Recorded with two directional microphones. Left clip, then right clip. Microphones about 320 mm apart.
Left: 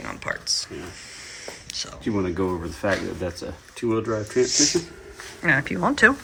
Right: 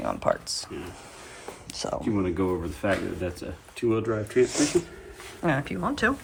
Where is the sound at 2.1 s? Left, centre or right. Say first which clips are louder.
Left 4 dB; centre.